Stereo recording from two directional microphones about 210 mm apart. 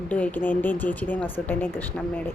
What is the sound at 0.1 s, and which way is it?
A woman's voice, 5° left (ahead or behind).